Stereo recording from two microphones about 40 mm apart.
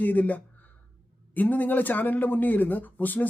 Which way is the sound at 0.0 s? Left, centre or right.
Left.